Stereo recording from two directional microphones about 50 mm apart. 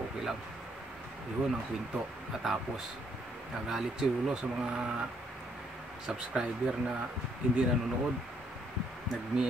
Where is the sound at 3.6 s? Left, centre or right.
Centre.